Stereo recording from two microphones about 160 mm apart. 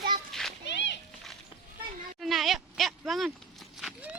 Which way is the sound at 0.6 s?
90° left.